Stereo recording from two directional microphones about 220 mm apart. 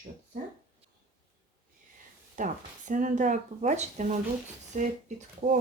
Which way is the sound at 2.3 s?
35° right (ahead or behind).